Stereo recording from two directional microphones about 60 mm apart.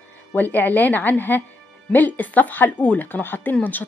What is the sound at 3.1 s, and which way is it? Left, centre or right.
Speech, left.